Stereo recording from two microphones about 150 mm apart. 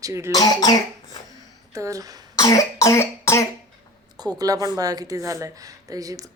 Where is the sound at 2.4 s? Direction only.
20° left (ahead or behind).